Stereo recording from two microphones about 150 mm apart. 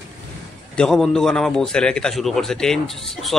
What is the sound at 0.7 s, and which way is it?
A man's voice, centre (ahead or behind).